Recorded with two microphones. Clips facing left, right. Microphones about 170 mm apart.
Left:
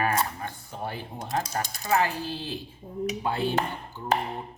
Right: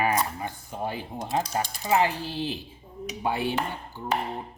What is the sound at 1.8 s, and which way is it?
Speech, 15° right (ahead or behind).